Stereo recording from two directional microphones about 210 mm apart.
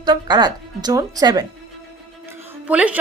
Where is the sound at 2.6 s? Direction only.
5° right (ahead or behind).